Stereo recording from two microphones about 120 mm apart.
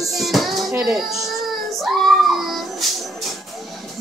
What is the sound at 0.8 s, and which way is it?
Child singing, 5° right (ahead or behind).